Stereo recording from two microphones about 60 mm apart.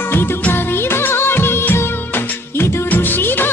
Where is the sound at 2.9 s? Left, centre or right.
Left.